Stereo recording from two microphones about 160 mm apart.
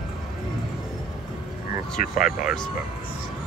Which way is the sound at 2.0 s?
60° left (ahead or behind).